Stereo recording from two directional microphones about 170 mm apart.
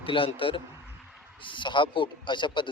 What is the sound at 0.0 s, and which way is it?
A man's voice, 30° left (ahead or behind).